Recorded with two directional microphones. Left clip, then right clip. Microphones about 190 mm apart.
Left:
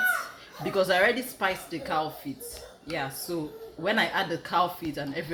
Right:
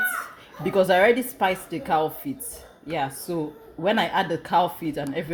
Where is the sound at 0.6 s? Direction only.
40° right (ahead or behind).